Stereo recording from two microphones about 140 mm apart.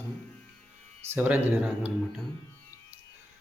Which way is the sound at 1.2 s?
10° right (ahead or behind).